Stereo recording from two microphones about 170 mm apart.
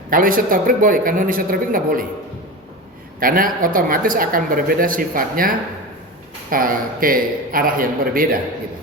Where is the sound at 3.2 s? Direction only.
55° right (ahead or behind).